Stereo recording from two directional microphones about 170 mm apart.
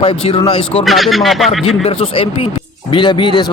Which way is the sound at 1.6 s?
35° left (ahead or behind).